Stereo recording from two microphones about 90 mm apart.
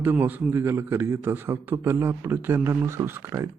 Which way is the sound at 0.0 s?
20° right (ahead or behind).